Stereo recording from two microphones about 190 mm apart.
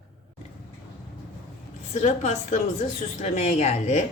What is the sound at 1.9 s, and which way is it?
Speech, 35° left (ahead or behind).